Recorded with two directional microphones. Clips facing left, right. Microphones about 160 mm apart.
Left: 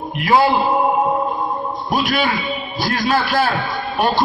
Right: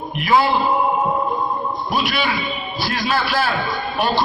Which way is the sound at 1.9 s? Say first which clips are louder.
Left 4 dB; 45° left (ahead or behind).